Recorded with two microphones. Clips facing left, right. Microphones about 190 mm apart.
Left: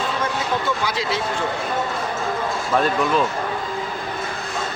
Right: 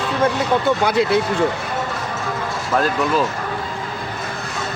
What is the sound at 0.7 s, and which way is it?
Speech, 60° right (ahead or behind).